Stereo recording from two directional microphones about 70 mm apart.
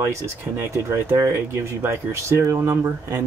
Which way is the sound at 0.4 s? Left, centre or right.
Right.